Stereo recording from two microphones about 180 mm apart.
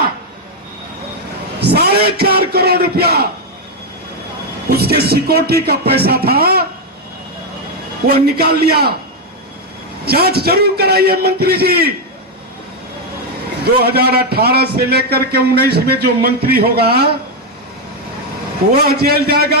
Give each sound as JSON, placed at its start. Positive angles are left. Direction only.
{"t": 1.5, "sound": "a man's voice", "side_deg": -60}
{"t": 4.7, "sound": "a man's voice", "side_deg": -60}
{"t": 8.0, "sound": "a man's voice", "side_deg": -60}
{"t": 10.1, "sound": "a man's voice", "side_deg": -60}
{"t": 13.8, "sound": "a man's voice", "side_deg": -60}
{"t": 18.7, "sound": "a man's voice", "side_deg": -60}